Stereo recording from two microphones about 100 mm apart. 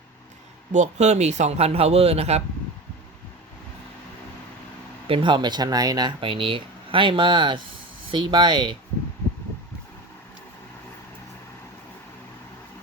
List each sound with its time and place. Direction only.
0.9 s speech: 90° right
5.0 s speech: 60° right (ahead or behind)